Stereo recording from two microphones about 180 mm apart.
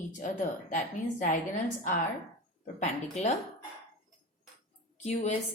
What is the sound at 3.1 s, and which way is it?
Speech, 35° left (ahead or behind).